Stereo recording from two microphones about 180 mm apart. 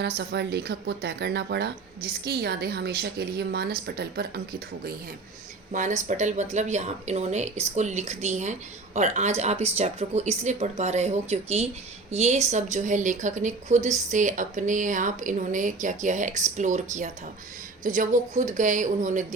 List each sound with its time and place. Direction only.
0.2 s speech: 70° right (ahead or behind)
5.7 s speech: 45° right (ahead or behind)